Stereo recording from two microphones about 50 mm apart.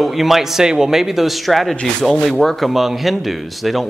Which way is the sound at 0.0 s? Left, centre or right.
Centre.